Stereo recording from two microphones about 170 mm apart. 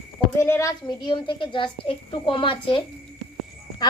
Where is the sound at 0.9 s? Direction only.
25° left (ahead or behind).